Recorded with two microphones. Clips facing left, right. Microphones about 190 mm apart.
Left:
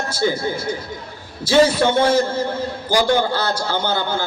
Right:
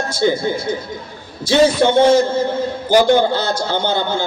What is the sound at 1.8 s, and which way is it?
A man's voice, 25° right (ahead or behind).